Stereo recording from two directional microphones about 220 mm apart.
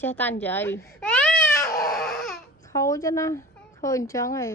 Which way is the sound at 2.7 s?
15° left (ahead or behind).